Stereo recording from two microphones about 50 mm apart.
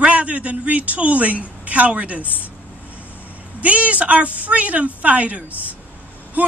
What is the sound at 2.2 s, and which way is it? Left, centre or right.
Speech, left.